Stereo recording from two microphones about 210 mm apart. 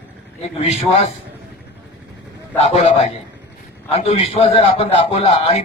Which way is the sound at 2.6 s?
30° left (ahead or behind).